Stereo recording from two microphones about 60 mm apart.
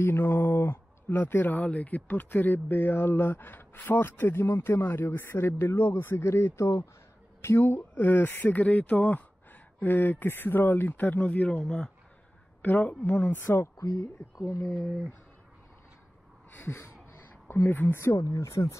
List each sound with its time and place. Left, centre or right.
0.0 s speech: left; by 11.9 s centre
12.6 s a woman's voice: left
13.4 s speech: left
14.3 s speech: left
16.5 s speech: left
18.1 s speech: left